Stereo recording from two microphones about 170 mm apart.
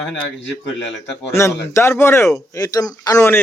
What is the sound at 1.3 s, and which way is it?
Speech, 15° left (ahead or behind).